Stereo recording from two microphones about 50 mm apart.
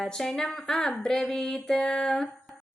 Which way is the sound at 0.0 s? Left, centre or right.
Centre.